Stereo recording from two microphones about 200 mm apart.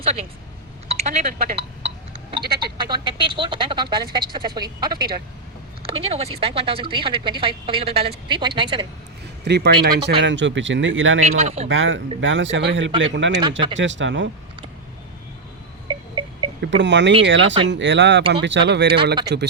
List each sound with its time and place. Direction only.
0.0 s speech: 30° right (ahead or behind)
2.7 s speech: 25° right (ahead or behind)
9.4 s speech: 55° right (ahead or behind); by 11.3 s 75° right (ahead or behind)
11.3 s speech: 35° right (ahead or behind)
11.7 s speech: 70° right (ahead or behind)
13.4 s speech: 25° right (ahead or behind)
13.7 s speech: 65° right (ahead or behind)
15.9 s a sound: 25° right (ahead or behind)
16.6 s speech: 60° right (ahead or behind)